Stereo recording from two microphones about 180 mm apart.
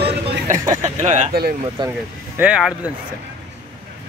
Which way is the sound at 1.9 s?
10° right (ahead or behind).